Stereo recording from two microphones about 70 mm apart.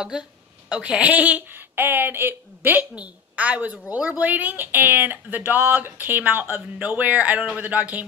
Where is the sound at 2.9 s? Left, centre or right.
Centre.